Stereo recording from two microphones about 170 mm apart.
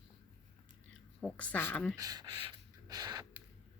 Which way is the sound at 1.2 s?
5° left (ahead or behind).